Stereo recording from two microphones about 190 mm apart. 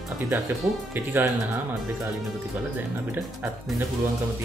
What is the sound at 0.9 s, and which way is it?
Speech, 10° right (ahead or behind).